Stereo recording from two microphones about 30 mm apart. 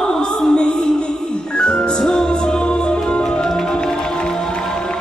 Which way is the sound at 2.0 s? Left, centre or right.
Left.